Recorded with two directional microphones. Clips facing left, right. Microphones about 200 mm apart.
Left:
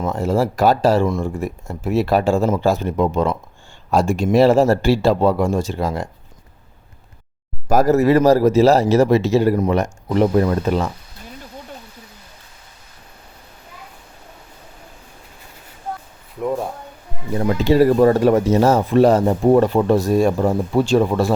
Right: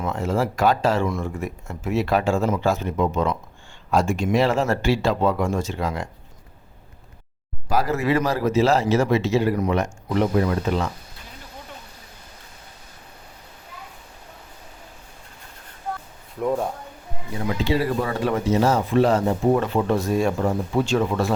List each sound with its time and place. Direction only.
0.0 s speech: 35° left (ahead or behind)
7.7 s speech: 40° left (ahead or behind)
16.4 s speech: centre (ahead or behind)
17.3 s speech: 45° left (ahead or behind)